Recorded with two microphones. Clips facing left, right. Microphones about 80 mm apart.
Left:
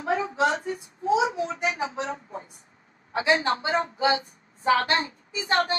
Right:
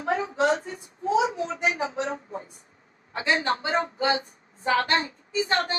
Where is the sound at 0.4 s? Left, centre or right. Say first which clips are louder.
Right 2 dB; left.